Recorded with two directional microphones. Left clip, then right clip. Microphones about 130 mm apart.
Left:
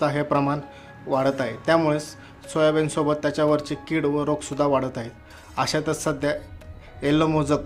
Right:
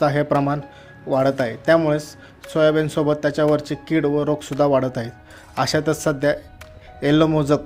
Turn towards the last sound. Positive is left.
turn(degrees=-40)  # may be behind; listen again after turning